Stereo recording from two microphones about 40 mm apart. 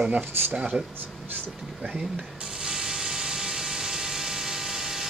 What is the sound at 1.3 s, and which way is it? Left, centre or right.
Speech, right.